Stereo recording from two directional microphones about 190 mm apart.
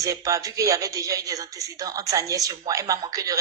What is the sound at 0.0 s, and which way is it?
Speech, 15° right (ahead or behind).